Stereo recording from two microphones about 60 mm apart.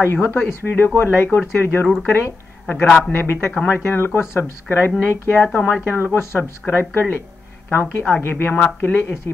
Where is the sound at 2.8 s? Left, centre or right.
Centre.